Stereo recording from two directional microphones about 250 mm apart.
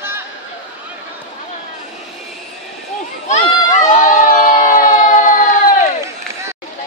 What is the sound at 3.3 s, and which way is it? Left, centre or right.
Crowd, left.